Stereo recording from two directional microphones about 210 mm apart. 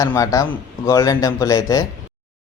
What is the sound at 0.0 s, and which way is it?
A man's voice, 15° left (ahead or behind).